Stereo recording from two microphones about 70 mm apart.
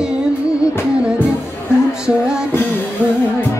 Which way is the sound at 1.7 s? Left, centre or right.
Left.